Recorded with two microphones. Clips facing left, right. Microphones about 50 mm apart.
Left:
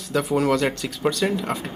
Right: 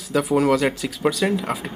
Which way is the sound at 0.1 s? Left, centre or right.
Centre.